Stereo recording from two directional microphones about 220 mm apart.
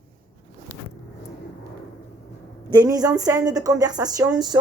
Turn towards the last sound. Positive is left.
turn(degrees=-20)  # may be behind; listen again after turning